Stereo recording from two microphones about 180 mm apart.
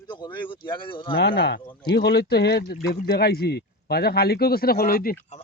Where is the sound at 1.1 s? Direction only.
65° left (ahead or behind).